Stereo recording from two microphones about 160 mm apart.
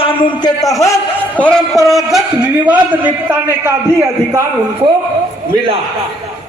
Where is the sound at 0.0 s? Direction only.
35° left (ahead or behind).